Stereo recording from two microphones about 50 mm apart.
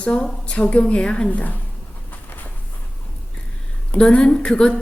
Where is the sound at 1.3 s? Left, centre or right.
Left.